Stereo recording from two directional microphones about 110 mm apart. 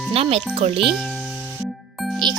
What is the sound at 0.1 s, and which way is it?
Speech, 60° right (ahead or behind).